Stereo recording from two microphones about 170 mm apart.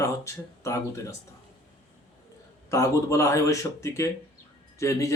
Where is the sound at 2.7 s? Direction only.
20° left (ahead or behind).